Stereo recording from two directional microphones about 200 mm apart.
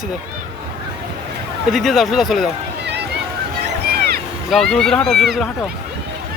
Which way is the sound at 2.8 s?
60° right (ahead or behind).